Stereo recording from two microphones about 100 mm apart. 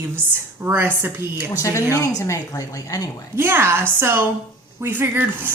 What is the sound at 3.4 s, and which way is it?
Speech, 25° right (ahead or behind).